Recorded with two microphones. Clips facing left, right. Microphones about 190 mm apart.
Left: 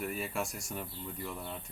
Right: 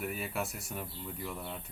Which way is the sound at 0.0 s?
5° right (ahead or behind).